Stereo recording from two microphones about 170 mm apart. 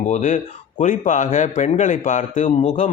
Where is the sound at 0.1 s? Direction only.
45° left (ahead or behind).